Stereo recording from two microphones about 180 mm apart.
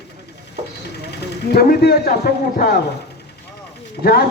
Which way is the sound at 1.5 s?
60° left (ahead or behind).